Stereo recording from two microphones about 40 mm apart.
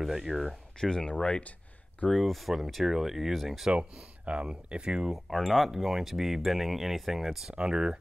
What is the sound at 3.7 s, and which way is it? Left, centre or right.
Speech, right.